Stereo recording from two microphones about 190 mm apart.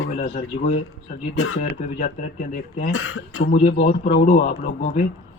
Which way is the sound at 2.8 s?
80° left.